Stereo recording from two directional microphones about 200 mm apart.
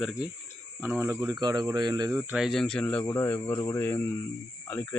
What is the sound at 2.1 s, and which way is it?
Speech, 5° right (ahead or behind).